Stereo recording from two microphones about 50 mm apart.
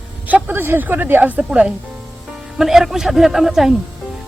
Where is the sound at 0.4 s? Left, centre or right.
Right.